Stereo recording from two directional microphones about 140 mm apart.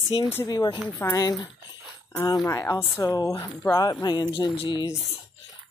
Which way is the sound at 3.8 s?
25° left (ahead or behind).